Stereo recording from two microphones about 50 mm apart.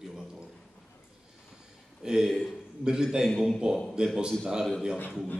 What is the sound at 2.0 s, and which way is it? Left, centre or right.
A man's voice, centre.